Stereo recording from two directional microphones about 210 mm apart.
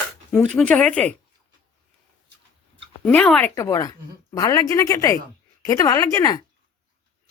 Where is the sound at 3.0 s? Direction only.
5° left (ahead or behind).